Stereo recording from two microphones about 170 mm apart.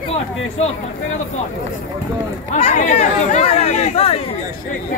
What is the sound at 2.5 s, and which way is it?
Speech, 45° left (ahead or behind).